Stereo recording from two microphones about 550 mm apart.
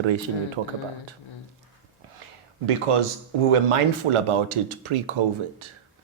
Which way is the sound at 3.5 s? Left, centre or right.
Right.